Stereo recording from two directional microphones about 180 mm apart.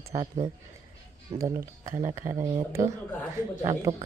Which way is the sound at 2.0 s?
15° right (ahead or behind).